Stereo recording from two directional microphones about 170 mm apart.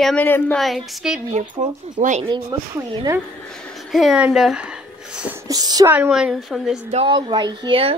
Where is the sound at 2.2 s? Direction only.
25° right (ahead or behind).